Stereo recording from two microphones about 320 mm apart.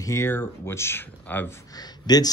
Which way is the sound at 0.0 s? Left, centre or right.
Centre.